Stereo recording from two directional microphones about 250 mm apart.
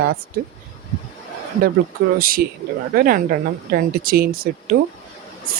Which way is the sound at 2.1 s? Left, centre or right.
Right.